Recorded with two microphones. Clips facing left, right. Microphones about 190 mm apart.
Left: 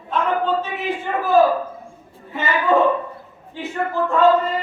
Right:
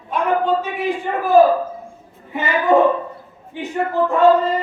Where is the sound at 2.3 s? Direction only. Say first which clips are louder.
Right 3 dB; 15° right (ahead or behind).